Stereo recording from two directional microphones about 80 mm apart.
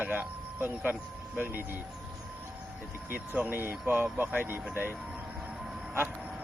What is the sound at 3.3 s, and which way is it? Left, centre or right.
Speech, right.